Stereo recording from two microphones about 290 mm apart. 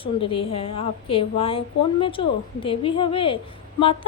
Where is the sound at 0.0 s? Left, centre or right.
Centre.